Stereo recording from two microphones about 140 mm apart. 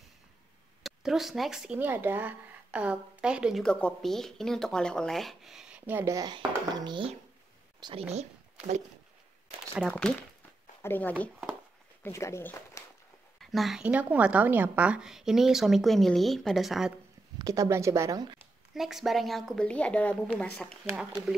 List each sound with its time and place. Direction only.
0.8 s speech: centre (ahead or behind)
3.6 s a woman's voice: 5° left (ahead or behind); by 6.1 s 15° right (ahead or behind)
6.1 s a child's voice: 30° right (ahead or behind)
8.1 s speech: 55° right (ahead or behind)
9.8 s a woman's voice: 5° left (ahead or behind)
13.4 s a woman's voice: centre (ahead or behind)
17.4 s speech: 25° right (ahead or behind)
18.8 s a woman's voice: centre (ahead or behind)
21.0 s a woman's voice: 5° right (ahead or behind)